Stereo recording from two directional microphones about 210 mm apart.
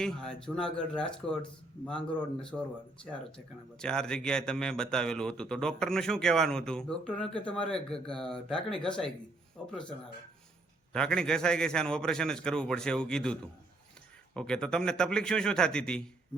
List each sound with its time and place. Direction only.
0.0 s speech: 5° left (ahead or behind)
10.9 s speech: 5° left (ahead or behind)